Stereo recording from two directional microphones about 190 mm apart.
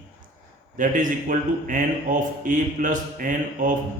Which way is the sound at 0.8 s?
45° right (ahead or behind).